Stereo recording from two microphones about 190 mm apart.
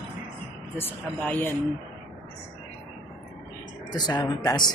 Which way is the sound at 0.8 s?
10° left (ahead or behind).